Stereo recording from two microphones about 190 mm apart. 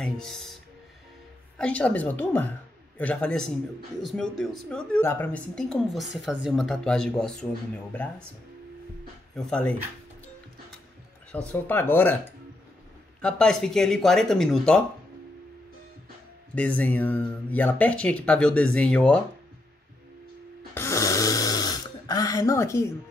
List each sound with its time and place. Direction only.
0.0 s speech: centre (ahead or behind)
1.6 s speech: 5° left (ahead or behind)
9.3 s speech: 5° left (ahead or behind)
11.3 s speech: 10° left (ahead or behind)
13.2 s speech: 5° left (ahead or behind)
16.5 s speech: 10° left (ahead or behind)
20.7 s snoring: 15° left (ahead or behind)